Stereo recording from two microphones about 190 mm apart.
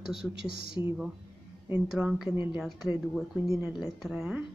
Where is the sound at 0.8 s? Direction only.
10° right (ahead or behind).